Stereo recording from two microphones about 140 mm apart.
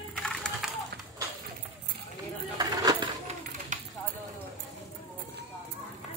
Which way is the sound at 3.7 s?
65° right (ahead or behind).